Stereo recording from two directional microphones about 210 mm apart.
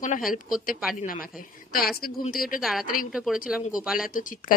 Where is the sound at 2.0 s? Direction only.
45° left (ahead or behind).